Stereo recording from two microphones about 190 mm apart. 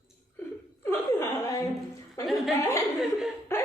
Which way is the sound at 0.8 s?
15° left (ahead or behind).